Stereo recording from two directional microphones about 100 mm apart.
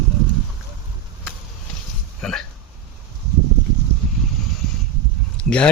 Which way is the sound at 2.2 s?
5° left (ahead or behind).